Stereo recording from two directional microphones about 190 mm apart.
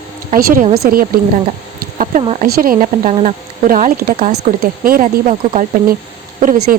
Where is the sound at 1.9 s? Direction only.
40° right (ahead or behind).